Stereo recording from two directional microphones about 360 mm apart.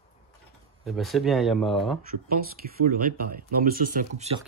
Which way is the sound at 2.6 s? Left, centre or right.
Right.